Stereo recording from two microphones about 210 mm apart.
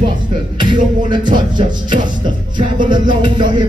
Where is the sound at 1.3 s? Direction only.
20° right (ahead or behind).